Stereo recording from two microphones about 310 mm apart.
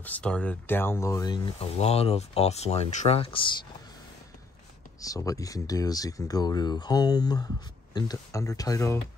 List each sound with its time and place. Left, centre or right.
0.0 s speech: centre
5.0 s speech: centre